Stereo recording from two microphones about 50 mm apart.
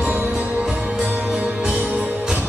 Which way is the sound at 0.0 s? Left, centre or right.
Centre.